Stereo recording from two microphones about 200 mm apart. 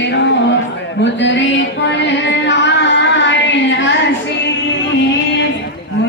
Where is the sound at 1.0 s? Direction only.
65° left (ahead or behind).